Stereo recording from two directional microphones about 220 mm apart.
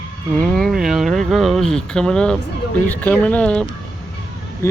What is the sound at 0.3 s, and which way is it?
Speech, 5° left (ahead or behind).